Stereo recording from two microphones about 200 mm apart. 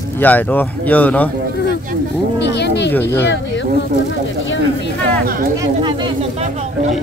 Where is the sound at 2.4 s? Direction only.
55° left (ahead or behind).